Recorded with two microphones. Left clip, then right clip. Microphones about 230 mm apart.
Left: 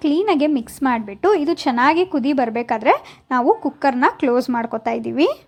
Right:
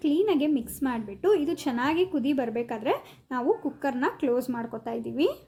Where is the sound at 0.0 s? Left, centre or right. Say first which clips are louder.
Left 7 dB; centre.